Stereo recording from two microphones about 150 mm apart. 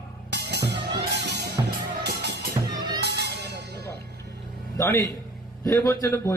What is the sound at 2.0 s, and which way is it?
Music, 85° right.